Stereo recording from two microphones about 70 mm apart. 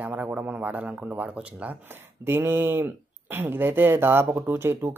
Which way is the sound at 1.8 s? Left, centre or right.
Right.